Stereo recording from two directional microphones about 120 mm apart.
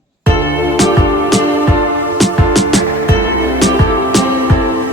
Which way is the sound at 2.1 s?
Centre (ahead or behind).